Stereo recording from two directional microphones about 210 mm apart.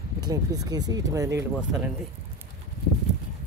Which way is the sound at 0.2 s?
20° right (ahead or behind).